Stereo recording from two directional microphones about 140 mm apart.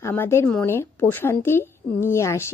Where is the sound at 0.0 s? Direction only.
15° left (ahead or behind).